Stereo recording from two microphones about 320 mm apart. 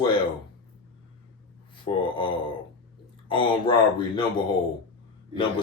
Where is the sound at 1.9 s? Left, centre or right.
Centre.